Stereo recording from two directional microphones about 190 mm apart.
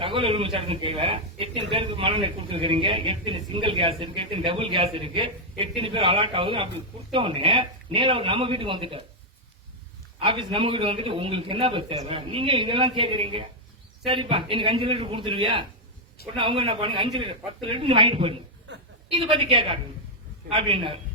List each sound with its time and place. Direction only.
0.0 s speech: 30° right (ahead or behind)
10.2 s speech: 25° right (ahead or behind)